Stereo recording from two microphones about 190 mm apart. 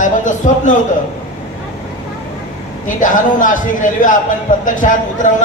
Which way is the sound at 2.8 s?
45° left (ahead or behind).